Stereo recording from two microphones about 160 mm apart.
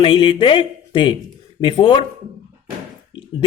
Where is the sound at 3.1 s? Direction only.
30° left (ahead or behind).